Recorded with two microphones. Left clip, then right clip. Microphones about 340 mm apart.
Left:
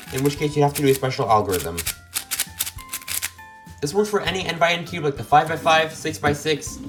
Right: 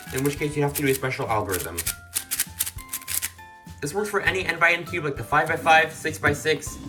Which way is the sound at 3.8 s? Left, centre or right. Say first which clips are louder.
Left 3 dB; centre.